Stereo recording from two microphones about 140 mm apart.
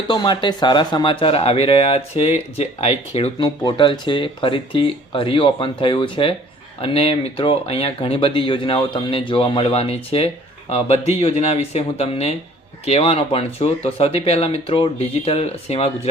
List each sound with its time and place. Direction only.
0.1 s speech: 35° left (ahead or behind)
3.4 s speech: 30° left (ahead or behind); by 15.9 s 45° left (ahead or behind)